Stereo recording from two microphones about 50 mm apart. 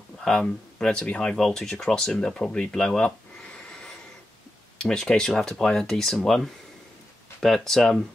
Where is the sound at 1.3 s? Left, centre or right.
Centre.